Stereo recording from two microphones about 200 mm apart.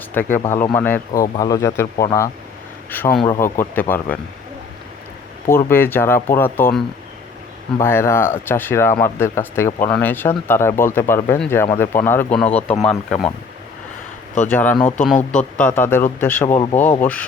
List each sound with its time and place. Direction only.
0.1 s speech: 10° left (ahead or behind)
5.5 s speech: 10° left (ahead or behind)
14.4 s speech: 10° left (ahead or behind)